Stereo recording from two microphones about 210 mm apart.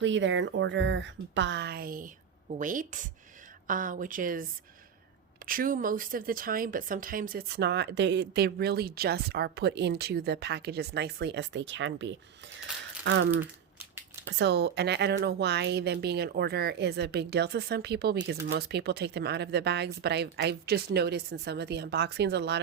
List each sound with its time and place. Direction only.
0.0 s speech: 60° right (ahead or behind); by 4.4 s 40° right (ahead or behind)
5.5 s speech: 40° right (ahead or behind); by 12.1 s 60° right (ahead or behind)
14.3 s speech: 55° right (ahead or behind)